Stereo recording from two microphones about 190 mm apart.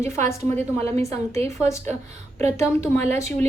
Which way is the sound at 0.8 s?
35° right (ahead or behind).